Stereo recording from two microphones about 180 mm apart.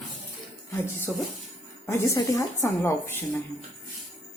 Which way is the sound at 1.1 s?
10° left (ahead or behind).